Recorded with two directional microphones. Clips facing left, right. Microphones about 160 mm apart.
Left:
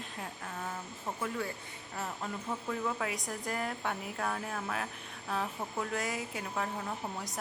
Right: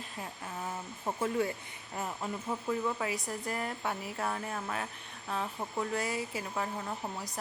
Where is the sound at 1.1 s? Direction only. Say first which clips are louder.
Right 6 dB; 25° right (ahead or behind).